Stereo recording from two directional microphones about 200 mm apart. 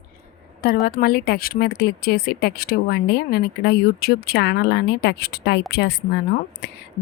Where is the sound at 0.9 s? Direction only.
50° left (ahead or behind).